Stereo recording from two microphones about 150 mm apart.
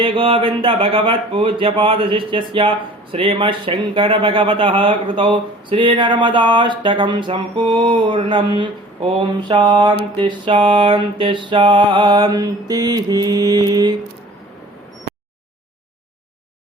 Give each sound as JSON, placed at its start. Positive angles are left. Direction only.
{"t": 0.0, "sound": "speech", "side_deg": -35}